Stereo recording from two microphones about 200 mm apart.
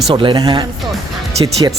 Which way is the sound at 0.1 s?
25° right (ahead or behind).